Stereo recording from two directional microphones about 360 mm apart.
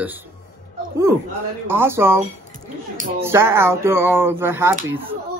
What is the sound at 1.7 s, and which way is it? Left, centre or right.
A man's voice, centre.